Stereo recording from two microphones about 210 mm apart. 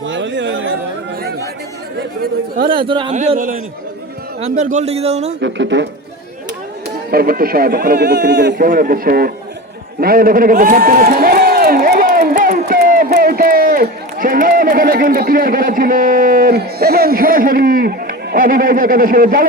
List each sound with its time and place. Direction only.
0.0 s a sound: 60° right (ahead or behind)
2.0 s speech: 45° right (ahead or behind)
2.8 s speech: 25° right (ahead or behind)
3.2 s a man's voice: 35° right (ahead or behind)
5.4 s speech: 60° right (ahead or behind)
7.1 s speech: 45° right (ahead or behind)
8.5 s a man's voice: 40° right (ahead or behind)